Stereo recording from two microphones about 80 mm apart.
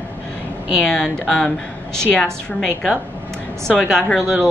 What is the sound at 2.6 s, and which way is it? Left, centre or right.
Speech, centre.